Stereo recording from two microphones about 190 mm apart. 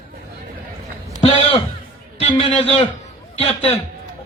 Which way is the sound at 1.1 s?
30° left (ahead or behind).